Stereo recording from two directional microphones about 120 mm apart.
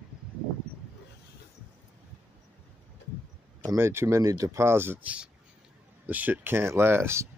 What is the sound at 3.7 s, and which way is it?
Speech, 20° right (ahead or behind).